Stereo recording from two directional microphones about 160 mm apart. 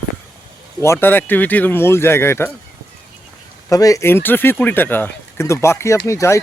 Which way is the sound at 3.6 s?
20° left (ahead or behind).